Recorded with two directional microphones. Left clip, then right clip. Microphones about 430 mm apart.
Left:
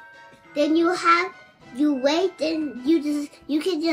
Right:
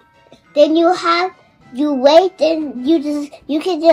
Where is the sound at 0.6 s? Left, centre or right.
Centre.